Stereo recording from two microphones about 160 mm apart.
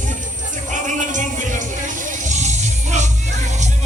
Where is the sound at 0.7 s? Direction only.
50° right (ahead or behind).